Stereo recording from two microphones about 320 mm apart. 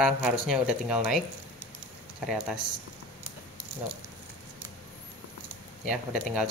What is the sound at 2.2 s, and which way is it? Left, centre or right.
Speech, centre.